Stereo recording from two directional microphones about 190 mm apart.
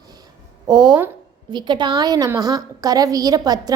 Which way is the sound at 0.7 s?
25° right (ahead or behind).